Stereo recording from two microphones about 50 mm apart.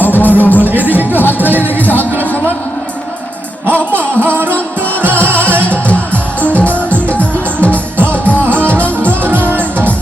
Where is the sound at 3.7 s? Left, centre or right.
Right.